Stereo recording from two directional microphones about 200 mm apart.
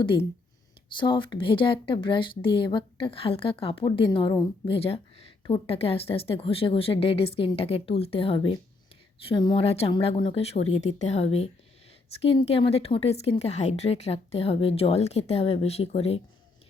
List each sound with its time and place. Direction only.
0.0 s speech: 25° left (ahead or behind)